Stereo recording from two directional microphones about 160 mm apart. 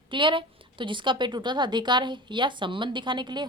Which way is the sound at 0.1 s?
30° right (ahead or behind).